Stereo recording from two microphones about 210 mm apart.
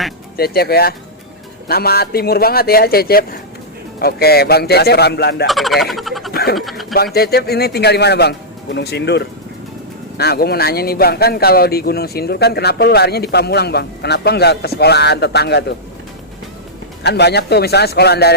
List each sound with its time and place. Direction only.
0.3 s speech: 50° left (ahead or behind)
5.5 s frog: centre (ahead or behind)
6.3 s a sound: 50° left (ahead or behind)
6.6 s speech: centre (ahead or behind)
6.9 s speech: 50° left (ahead or behind)
17.0 s speech: 50° left (ahead or behind)